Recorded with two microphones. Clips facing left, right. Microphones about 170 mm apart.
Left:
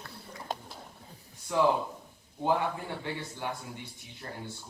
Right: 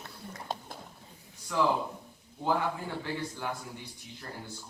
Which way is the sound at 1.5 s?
25° left (ahead or behind).